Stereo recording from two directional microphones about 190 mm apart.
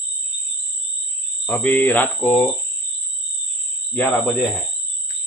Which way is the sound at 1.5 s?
10° left (ahead or behind).